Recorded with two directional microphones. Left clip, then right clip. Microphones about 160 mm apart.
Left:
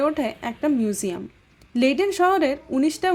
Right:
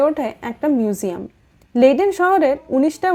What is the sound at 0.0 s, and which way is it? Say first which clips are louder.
Speech: right 5 dB; centre (ahead or behind).